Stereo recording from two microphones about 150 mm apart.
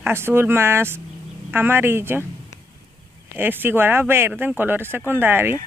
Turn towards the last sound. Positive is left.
turn(degrees=-15)  # may be behind; listen again after turning